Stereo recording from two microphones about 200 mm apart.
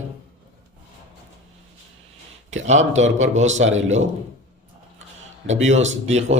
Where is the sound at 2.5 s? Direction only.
35° right (ahead or behind).